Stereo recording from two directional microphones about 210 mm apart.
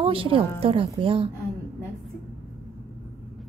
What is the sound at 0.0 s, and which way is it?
A woman's voice, 25° right (ahead or behind).